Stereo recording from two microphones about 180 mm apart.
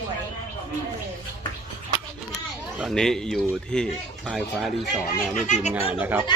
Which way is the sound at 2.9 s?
5° left (ahead or behind).